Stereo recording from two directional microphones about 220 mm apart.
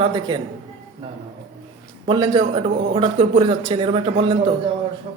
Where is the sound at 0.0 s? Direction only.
20° right (ahead or behind).